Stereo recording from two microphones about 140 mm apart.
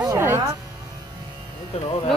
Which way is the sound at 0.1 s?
15° right (ahead or behind).